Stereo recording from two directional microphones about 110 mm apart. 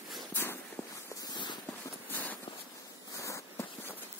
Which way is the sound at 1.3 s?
45° left (ahead or behind).